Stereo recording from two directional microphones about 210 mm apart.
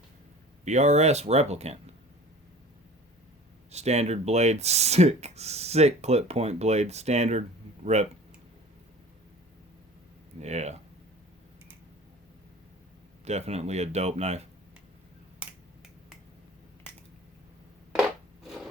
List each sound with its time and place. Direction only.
0.6 s speech: 35° right (ahead or behind)
3.7 s speech: 30° right (ahead or behind)
10.4 s speech: 30° right (ahead or behind)
13.2 s speech: 30° right (ahead or behind)
15.4 s finger snapping: centre (ahead or behind)